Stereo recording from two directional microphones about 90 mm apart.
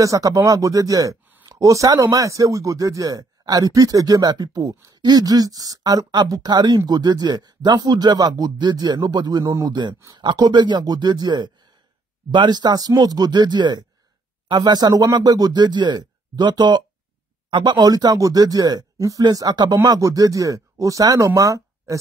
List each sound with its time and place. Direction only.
0.0 s speech: 40° right (ahead or behind)
9.4 s speech: 40° right (ahead or behind)
10.1 s speech: 50° right (ahead or behind)
21.4 s a sound: 35° right (ahead or behind)